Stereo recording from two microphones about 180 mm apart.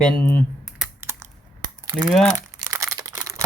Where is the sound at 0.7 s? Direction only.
10° right (ahead or behind).